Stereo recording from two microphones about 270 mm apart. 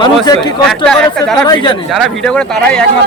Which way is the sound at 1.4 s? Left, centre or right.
Centre.